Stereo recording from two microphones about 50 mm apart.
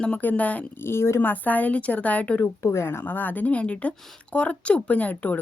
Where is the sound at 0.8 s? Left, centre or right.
Left.